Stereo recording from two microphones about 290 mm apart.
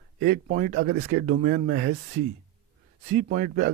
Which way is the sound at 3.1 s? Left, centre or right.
Right.